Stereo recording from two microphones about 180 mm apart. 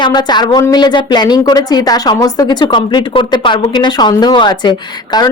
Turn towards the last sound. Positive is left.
turn(degrees=25)  # may be behind; listen again after turning